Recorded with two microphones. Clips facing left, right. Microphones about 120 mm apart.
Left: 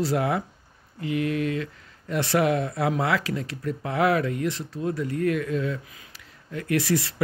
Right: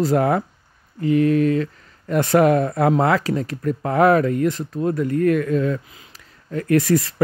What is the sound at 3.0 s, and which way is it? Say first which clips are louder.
Speech: right 7 dB; 40° right (ahead or behind).